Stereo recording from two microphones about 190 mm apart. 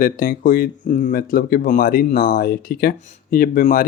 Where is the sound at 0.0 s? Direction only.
45° left (ahead or behind).